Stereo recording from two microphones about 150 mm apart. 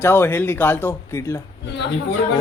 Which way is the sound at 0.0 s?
15° left (ahead or behind).